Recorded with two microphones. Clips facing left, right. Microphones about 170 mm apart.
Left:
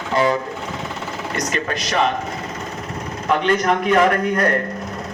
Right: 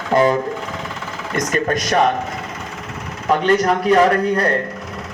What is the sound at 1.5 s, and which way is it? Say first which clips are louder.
Speech: right 5 dB; 45° right (ahead or behind).